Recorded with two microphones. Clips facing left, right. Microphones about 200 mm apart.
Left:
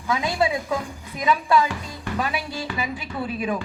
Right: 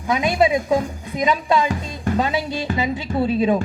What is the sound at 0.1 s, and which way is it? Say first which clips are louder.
Speech: right 5 dB; 20° right (ahead or behind).